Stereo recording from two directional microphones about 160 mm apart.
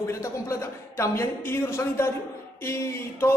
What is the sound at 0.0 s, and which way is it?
A woman's voice, 20° left (ahead or behind).